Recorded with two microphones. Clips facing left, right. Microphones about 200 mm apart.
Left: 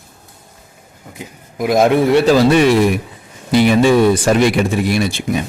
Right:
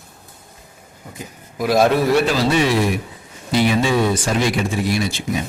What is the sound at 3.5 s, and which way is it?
A man's voice, 60° left (ahead or behind).